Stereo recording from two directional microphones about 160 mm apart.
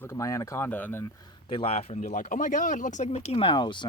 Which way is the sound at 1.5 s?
35° left (ahead or behind).